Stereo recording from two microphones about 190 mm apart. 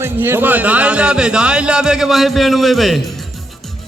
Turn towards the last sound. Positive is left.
turn(degrees=0)  # may be behind; listen again after turning